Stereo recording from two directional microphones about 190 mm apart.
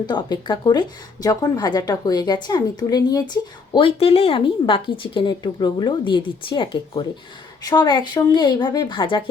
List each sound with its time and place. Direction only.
0.0 s a woman's voice: 25° left (ahead or behind)